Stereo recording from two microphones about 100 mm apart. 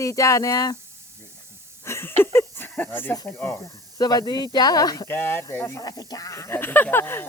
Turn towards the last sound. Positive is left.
turn(degrees=20)  # may be behind; listen again after turning